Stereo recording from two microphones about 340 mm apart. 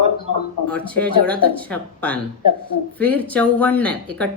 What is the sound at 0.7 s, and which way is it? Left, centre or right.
A woman's voice, centre.